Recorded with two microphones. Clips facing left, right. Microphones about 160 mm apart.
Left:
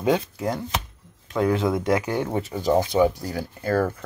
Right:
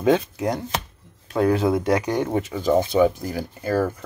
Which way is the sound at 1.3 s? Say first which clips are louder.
Right 2 dB; 35° right (ahead or behind).